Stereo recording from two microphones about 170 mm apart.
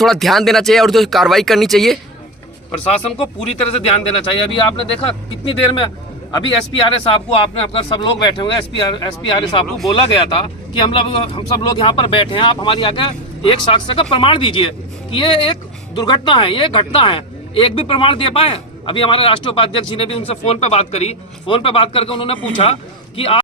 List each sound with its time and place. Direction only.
0.0 s speech: centre (ahead or behind)
3.8 s a man's voice: 35° left (ahead or behind)